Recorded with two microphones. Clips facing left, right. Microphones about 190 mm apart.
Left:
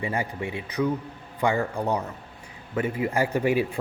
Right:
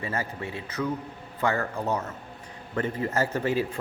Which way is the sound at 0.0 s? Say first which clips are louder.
Left 3 dB; 15° left (ahead or behind).